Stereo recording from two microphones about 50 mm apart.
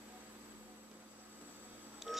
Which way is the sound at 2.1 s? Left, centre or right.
Centre.